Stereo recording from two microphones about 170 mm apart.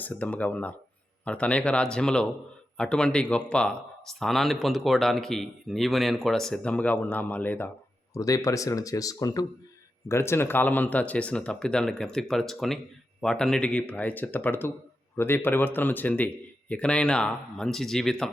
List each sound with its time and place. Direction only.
0.0 s speech: 10° left (ahead or behind)